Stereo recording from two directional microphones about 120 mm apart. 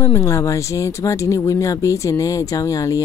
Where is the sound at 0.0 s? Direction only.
20° left (ahead or behind).